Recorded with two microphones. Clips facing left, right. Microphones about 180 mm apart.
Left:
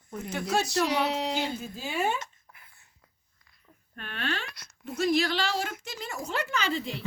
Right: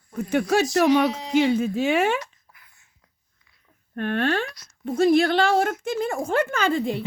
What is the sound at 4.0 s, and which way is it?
Speech, 50° right (ahead or behind).